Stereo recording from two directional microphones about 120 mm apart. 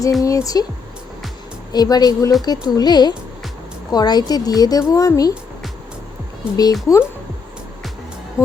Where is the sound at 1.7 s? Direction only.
35° left (ahead or behind).